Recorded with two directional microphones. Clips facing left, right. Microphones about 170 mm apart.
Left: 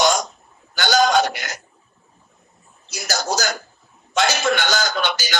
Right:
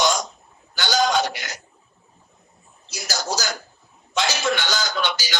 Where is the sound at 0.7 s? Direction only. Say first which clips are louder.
Left 4 dB; 50° left (ahead or behind).